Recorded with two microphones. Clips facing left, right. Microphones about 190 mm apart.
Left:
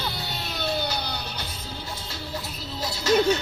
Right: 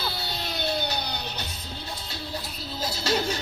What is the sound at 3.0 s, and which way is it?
Music, 35° right (ahead or behind).